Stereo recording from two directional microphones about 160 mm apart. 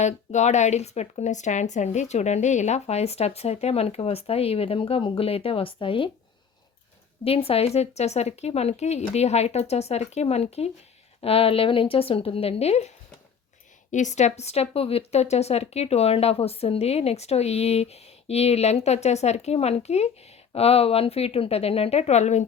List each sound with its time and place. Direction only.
0.0 s a woman's voice: 45° left (ahead or behind)
7.3 s a woman's voice: 35° left (ahead or behind)
13.9 s a woman's voice: 50° left (ahead or behind)